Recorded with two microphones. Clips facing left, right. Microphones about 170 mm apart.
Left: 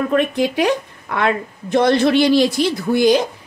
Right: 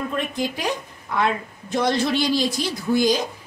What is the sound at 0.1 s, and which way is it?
Speech, 65° left (ahead or behind).